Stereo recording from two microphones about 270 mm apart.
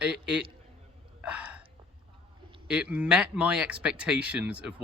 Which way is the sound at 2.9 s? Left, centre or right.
Centre.